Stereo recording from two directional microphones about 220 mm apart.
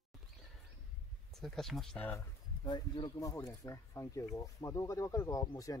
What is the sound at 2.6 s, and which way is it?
Speech, 20° left (ahead or behind).